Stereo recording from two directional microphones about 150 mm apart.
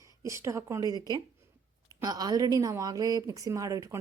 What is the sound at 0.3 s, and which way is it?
A woman's voice, 20° right (ahead or behind).